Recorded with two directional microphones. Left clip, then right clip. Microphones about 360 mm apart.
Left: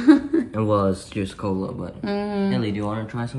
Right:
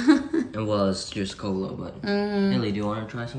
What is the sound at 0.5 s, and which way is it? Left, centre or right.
Speech, centre.